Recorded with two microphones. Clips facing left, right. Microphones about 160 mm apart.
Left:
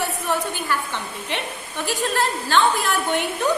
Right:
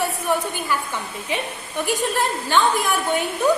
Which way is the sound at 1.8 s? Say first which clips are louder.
Right 1 dB; 15° right (ahead or behind).